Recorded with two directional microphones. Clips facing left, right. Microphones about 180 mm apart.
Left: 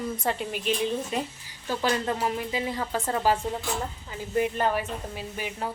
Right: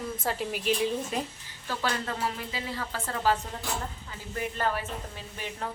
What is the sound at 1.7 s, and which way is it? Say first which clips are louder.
Speech: left 5 dB; 15° left (ahead or behind).